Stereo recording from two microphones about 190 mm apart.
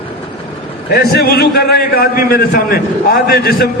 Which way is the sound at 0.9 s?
55° left (ahead or behind).